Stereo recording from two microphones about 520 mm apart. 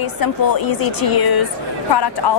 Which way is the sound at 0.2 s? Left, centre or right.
Left.